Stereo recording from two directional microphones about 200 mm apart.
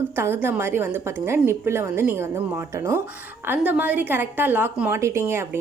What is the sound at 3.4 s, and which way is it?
A woman's voice, 10° right (ahead or behind).